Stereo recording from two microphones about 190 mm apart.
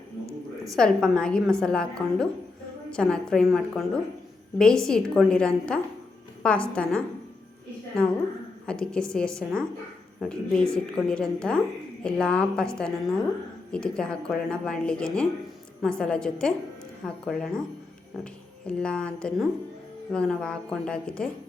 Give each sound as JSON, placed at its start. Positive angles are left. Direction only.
{"t": 0.3, "sound": "a sound", "side_deg": -15}
{"t": 0.8, "sound": "a woman's voice", "side_deg": 5}
{"t": 8.6, "sound": "a woman's voice", "side_deg": 5}
{"t": 18.7, "sound": "a woman's voice", "side_deg": 5}